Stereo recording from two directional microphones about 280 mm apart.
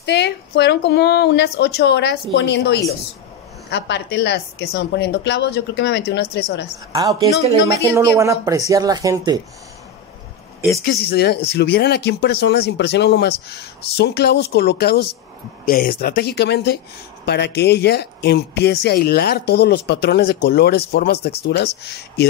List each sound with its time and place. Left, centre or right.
0.0 s speech: left
6.9 s speech: centre
10.8 s speech: left